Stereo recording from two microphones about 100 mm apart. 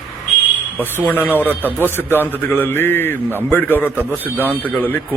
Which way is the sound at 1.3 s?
20° right (ahead or behind).